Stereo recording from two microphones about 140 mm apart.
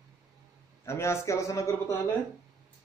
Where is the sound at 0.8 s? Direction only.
20° left (ahead or behind).